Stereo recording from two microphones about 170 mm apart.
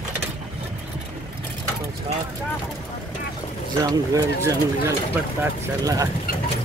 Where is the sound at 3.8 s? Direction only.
20° right (ahead or behind).